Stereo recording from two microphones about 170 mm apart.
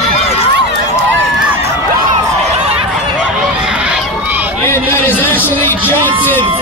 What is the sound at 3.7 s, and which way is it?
Run, 5° right (ahead or behind).